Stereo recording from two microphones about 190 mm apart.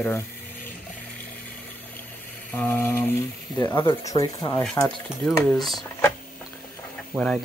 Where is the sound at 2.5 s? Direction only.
10° left (ahead or behind).